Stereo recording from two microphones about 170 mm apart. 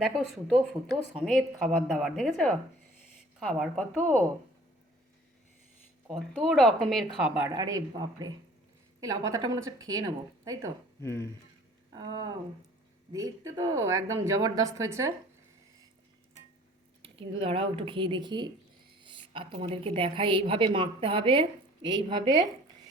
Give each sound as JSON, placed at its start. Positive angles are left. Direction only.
{"t": 0.5, "sound": "a woman's voice", "side_deg": 0}
{"t": 6.1, "sound": "a woman's voice", "side_deg": 0}
{"t": 7.5, "sound": "a woman's voice", "side_deg": -20}
{"t": 11.0, "sound": "speech", "side_deg": 15}
{"t": 11.9, "sound": "a woman's voice", "side_deg": -25}
{"t": 17.2, "sound": "a woman's voice", "side_deg": -30}